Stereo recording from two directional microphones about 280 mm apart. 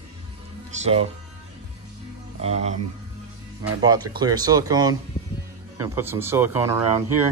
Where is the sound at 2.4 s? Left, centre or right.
Right.